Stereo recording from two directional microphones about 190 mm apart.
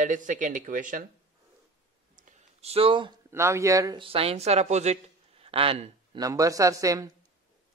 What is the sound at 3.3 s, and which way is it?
Speech, 15° right (ahead or behind).